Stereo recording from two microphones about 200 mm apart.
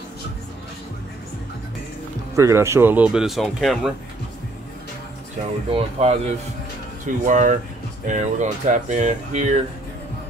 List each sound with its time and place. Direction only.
2.3 s speech: 15° right (ahead or behind)
5.7 s speech: 30° right (ahead or behind)